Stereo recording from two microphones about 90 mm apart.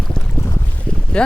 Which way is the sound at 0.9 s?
10° left (ahead or behind).